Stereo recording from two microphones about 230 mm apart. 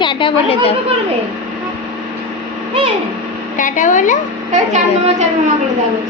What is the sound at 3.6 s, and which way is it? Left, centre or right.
Speech, left.